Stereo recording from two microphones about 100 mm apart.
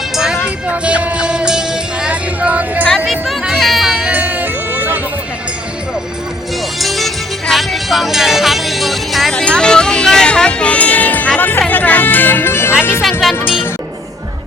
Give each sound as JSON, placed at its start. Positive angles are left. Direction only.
{"t": 0.7, "sound": "music", "side_deg": -15}
{"t": 3.1, "sound": "music", "side_deg": -5}
{"t": 6.7, "sound": "music", "side_deg": 0}
{"t": 13.0, "sound": "music", "side_deg": 0}